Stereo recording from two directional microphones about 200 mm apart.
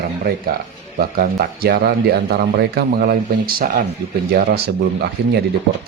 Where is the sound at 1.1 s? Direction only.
45° right (ahead or behind).